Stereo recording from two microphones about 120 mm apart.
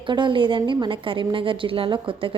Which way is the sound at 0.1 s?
40° right (ahead or behind).